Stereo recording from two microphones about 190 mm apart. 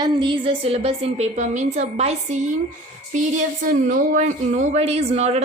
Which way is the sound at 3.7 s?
45° right (ahead or behind).